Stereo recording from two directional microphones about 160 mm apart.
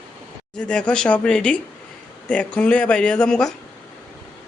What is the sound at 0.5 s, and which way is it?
A woman's voice, 5° left (ahead or behind).